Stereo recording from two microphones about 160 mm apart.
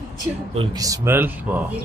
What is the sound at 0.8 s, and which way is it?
Speech, 20° right (ahead or behind).